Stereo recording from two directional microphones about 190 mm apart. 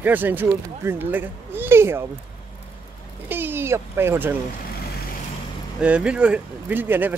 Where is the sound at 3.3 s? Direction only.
10° right (ahead or behind).